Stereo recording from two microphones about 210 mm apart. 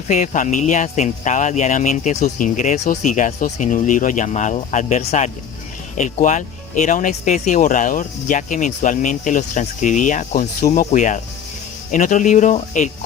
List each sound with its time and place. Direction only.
0.1 s speech: 35° left (ahead or behind)